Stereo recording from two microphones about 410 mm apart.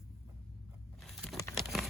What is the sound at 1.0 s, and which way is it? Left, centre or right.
Crumpling, centre.